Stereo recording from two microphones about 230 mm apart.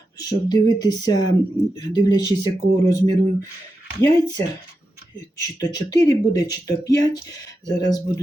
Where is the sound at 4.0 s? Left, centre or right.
Centre.